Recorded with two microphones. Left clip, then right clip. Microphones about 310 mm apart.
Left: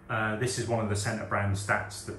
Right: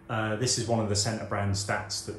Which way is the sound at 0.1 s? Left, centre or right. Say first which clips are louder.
Right 1 dB; centre.